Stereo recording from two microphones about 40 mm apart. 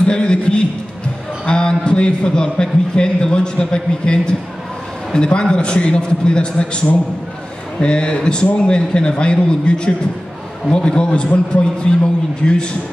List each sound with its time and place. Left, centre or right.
0.0 s a sound: left
1.4 s a man's voice: left
7.8 s a man's voice: left